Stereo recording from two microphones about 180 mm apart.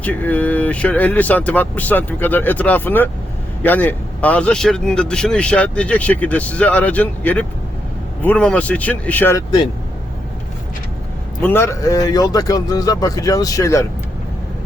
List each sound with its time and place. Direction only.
0.0 s a man's voice: 10° left (ahead or behind)
11.4 s a man's voice: 15° left (ahead or behind)